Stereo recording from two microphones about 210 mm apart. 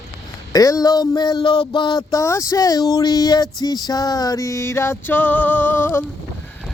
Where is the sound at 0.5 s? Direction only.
15° left (ahead or behind).